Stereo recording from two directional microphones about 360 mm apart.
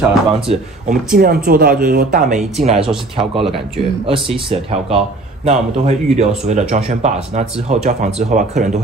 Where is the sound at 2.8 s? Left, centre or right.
Centre.